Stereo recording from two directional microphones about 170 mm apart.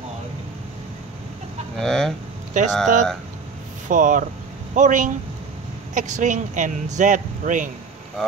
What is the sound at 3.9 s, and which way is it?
A man's voice, 50° right (ahead or behind).